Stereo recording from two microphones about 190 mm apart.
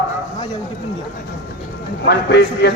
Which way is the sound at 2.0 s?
60° left (ahead or behind).